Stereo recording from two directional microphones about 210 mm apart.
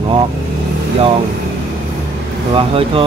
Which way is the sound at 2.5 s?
25° right (ahead or behind).